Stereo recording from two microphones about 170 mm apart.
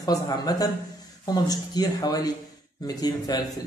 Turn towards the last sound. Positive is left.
turn(degrees=20)  # may be behind; listen again after turning